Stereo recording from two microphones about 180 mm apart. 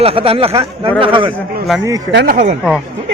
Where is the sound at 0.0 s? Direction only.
30° right (ahead or behind).